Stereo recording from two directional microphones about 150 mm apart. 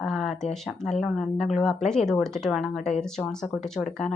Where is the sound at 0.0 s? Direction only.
Centre (ahead or behind).